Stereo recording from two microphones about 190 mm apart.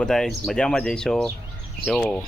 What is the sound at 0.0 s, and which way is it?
Speech, centre (ahead or behind).